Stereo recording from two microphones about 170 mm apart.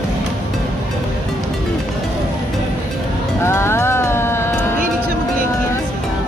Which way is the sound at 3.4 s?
15° left (ahead or behind).